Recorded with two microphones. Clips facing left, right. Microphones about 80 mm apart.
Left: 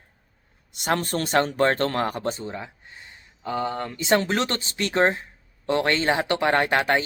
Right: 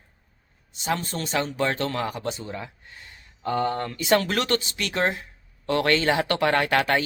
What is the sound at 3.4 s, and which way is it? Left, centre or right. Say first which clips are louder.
Speech: right 2 dB; centre.